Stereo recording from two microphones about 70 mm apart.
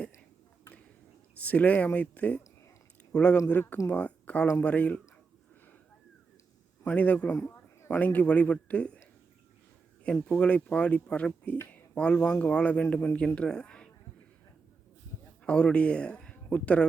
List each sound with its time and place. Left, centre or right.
1.4 s speech: left
6.8 s speech: left
7.4 s a sound: left
7.9 s speech: left
10.2 s speech: centre
15.4 s speech: centre